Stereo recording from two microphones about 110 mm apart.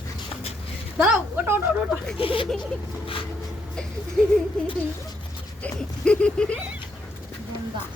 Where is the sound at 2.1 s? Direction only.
55° left (ahead or behind).